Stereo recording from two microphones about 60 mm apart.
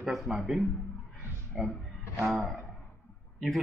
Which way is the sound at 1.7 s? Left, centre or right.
Centre.